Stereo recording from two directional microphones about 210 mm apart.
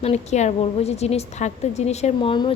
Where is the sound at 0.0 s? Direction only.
30° left (ahead or behind).